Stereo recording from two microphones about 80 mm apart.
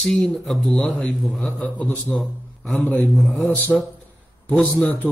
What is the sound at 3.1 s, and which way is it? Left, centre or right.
Speech, centre.